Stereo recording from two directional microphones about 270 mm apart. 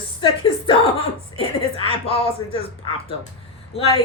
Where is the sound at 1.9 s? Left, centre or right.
Left.